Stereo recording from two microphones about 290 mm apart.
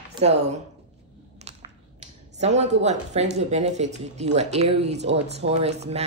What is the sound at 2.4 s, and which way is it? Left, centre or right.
Speech, right.